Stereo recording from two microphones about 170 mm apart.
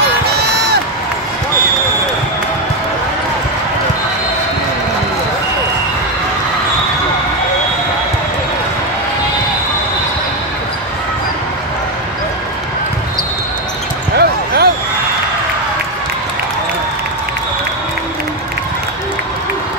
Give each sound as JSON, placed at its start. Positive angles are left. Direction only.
{"t": 14.1, "sound": "basketball bounce", "side_deg": -70}